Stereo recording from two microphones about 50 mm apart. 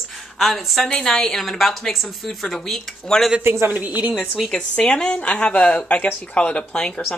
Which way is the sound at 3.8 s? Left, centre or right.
Right.